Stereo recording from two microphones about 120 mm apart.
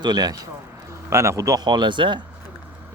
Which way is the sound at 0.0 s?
35° right (ahead or behind).